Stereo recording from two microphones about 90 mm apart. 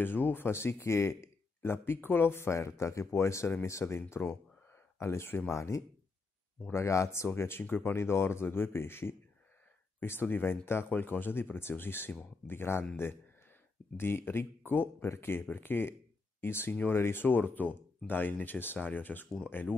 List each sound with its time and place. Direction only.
0.0 s speech: 20° left (ahead or behind)
13.9 s speech: 25° left (ahead or behind)